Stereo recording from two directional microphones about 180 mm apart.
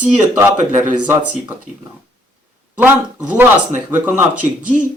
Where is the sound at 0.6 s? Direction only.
45° right (ahead or behind).